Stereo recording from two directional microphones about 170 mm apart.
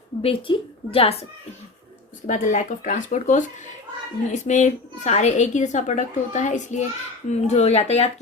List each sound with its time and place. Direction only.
0.2 s a woman's voice: 35° left (ahead or behind)
2.2 s a woman's voice: 50° left (ahead or behind)